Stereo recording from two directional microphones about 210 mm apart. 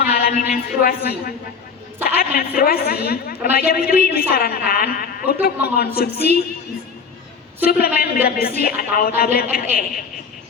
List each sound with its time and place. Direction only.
0.0 s a man's voice: 45° left (ahead or behind)
7.6 s a woman's voice: 45° left (ahead or behind)